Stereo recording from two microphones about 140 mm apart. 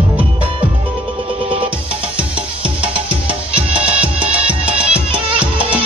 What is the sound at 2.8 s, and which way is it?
Music, 40° right (ahead or behind).